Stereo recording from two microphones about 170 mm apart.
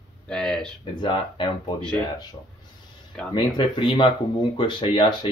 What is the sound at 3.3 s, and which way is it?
Speech, 30° left (ahead or behind).